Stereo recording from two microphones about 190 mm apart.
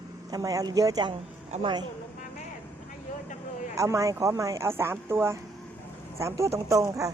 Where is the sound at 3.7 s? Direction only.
15° right (ahead or behind).